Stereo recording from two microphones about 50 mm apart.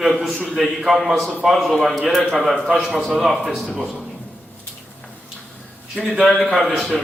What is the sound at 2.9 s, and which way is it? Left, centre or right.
Speech, centre.